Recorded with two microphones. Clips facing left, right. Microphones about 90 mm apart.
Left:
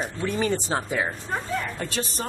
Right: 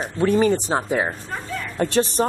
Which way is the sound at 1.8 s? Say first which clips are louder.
Right 10 dB; 60° right (ahead or behind).